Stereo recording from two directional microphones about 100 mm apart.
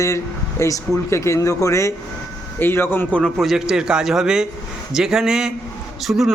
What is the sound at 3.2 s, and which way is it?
A man's voice, 5° left (ahead or behind).